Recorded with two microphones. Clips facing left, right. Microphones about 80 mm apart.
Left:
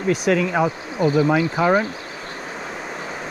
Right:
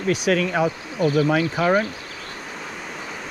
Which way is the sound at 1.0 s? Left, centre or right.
Left.